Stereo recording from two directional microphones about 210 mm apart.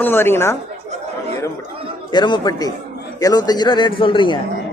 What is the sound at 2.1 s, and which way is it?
A man's voice, 20° left (ahead or behind).